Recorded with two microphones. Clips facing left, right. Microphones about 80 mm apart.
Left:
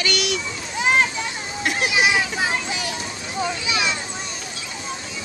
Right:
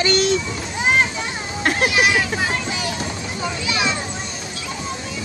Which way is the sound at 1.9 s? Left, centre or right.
Centre.